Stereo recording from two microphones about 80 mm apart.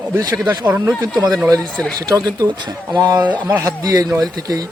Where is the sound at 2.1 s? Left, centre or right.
Right.